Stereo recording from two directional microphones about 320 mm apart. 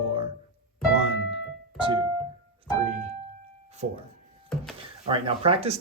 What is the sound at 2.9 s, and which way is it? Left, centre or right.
Piano, centre.